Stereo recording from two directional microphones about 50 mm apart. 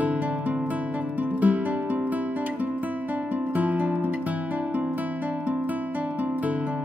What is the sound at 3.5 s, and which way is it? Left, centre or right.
Music, right.